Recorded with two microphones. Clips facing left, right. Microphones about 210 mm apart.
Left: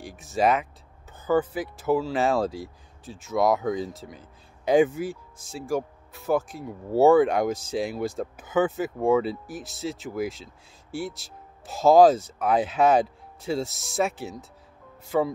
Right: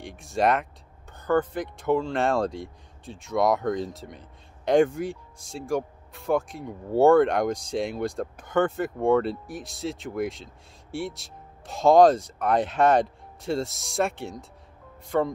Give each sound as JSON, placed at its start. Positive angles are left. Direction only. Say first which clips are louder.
{"t": 0.0, "sound": "speech", "louder": "left 1 dB", "side_deg": 0}